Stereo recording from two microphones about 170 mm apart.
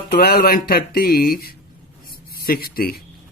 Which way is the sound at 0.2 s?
60° left (ahead or behind).